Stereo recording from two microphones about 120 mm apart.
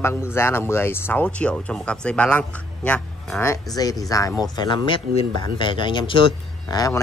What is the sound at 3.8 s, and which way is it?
Speech, 35° left (ahead or behind).